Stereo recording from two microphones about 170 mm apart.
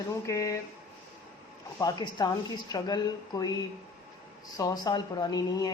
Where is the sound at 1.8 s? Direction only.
20° left (ahead or behind).